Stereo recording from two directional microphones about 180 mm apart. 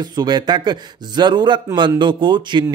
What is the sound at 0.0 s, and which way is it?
Speech, 25° right (ahead or behind).